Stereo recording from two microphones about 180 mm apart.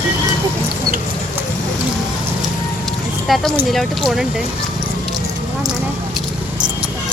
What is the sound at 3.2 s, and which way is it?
Speech, centre (ahead or behind).